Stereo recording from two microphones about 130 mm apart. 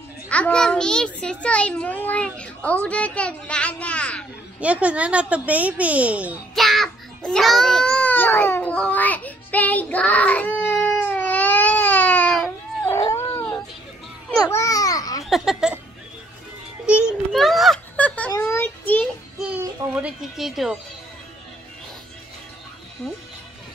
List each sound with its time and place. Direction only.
0.3 s a child's voice: 10° left (ahead or behind)
4.6 s speech: 10° right (ahead or behind)
6.5 s a sound: centre (ahead or behind); by 13.2 s 20° left (ahead or behind)
14.5 s babbling: 25° left (ahead or behind)
15.2 s a sound: centre (ahead or behind)
17.3 s speech: centre (ahead or behind)
17.9 s a sound: 10° left (ahead or behind)
18.5 s child singing: 15° left (ahead or behind)
19.9 s speech: 10° right (ahead or behind)
23.0 s speech: centre (ahead or behind)